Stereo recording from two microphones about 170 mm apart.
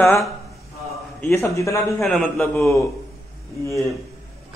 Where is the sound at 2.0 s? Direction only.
5° left (ahead or behind).